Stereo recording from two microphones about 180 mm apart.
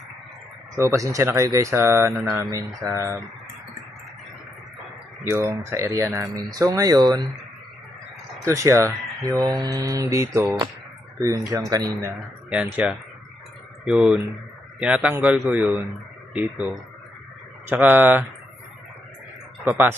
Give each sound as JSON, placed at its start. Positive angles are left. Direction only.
{"t": 0.8, "sound": "speech", "side_deg": -15}
{"t": 2.1, "sound": "speech", "side_deg": 0}
{"t": 2.4, "sound": "speech", "side_deg": -15}
{"t": 5.2, "sound": "speech", "side_deg": -15}
{"t": 8.4, "sound": "speech", "side_deg": -15}
{"t": 9.3, "sound": "mantra", "side_deg": -20}
{"t": 10.3, "sound": "speech", "side_deg": -15}
{"t": 11.2, "sound": "mantra", "side_deg": -20}
{"t": 12.5, "sound": "speech", "side_deg": -10}
{"t": 19.6, "sound": "speech", "side_deg": -10}